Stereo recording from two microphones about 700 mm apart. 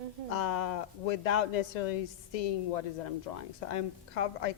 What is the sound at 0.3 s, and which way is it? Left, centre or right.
A man's voice, left.